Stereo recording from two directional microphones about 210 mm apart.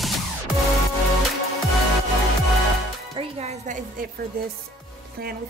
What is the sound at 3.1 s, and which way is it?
Music, 30° right (ahead or behind).